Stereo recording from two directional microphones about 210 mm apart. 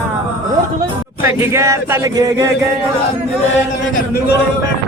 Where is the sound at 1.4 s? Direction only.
15° right (ahead or behind).